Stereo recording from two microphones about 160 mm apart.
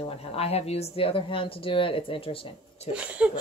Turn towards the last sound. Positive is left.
turn(degrees=-10)  # may be behind; listen again after turning